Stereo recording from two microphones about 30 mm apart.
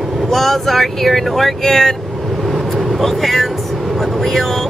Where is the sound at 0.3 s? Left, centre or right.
Centre.